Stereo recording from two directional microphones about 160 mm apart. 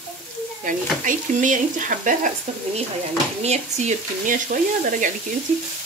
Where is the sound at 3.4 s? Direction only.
45° right (ahead or behind).